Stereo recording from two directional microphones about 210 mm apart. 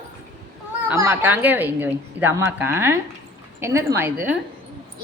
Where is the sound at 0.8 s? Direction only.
15° right (ahead or behind).